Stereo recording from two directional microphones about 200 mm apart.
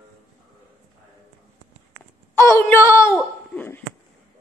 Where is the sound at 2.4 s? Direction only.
15° left (ahead or behind).